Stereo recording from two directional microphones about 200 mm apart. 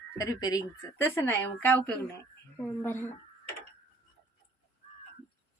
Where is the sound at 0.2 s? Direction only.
15° left (ahead or behind).